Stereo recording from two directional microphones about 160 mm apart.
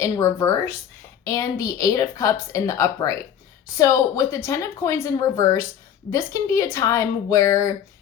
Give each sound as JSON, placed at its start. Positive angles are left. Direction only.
{"t": 0.0, "sound": "speech", "side_deg": 15}